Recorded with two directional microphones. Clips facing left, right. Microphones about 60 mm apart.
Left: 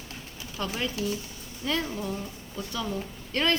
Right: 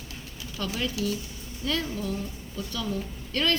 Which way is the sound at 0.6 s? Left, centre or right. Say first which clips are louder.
Right 1 dB; left.